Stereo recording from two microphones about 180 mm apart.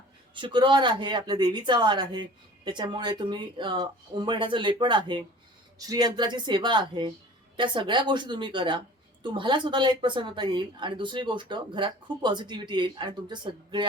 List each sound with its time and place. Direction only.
0.3 s a woman's voice: 25° right (ahead or behind)